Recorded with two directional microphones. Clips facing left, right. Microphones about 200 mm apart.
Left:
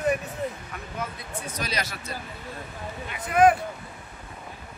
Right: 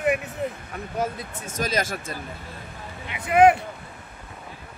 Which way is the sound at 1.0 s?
45° right (ahead or behind).